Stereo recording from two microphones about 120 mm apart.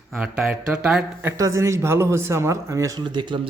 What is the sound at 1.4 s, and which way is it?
Speech, 25° right (ahead or behind).